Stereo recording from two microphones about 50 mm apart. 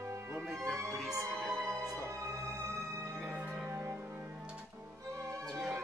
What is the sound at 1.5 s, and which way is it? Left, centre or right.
Music, right.